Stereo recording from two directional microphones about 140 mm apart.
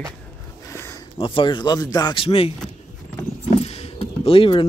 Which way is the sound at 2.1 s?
40° left (ahead or behind).